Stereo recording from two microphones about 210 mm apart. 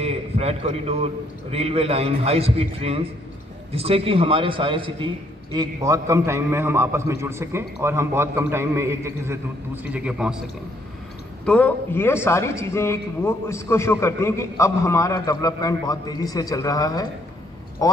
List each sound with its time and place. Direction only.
0.0 s a man's voice: 30° right (ahead or behind); by 10.4 s 5° right (ahead or behind)
11.4 s a man's voice: 5° left (ahead or behind)